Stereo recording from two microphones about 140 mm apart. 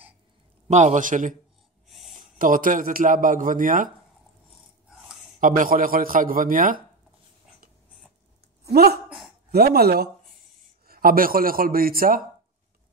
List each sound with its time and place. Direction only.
0.7 s a man's voice: 55° right (ahead or behind)
1.9 s a sound: centre (ahead or behind)
2.1 s a man's voice: 75° right (ahead or behind)
5.4 s a man's voice: 75° right (ahead or behind)
9.5 s a man's voice: 90° right